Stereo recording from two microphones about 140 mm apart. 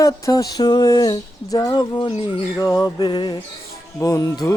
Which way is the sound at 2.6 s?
25° left (ahead or behind).